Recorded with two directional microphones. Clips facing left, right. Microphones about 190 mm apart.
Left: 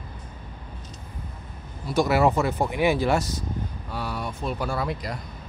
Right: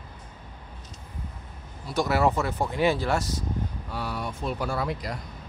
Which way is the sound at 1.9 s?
15° left (ahead or behind).